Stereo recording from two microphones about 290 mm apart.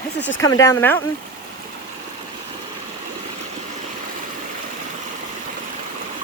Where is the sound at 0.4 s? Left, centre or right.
Centre.